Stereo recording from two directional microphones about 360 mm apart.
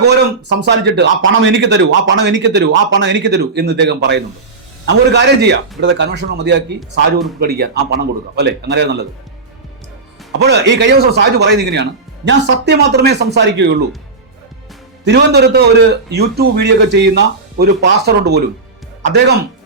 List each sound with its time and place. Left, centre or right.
0.0 s a man's voice: right
10.3 s a man's voice: right
15.0 s a man's voice: right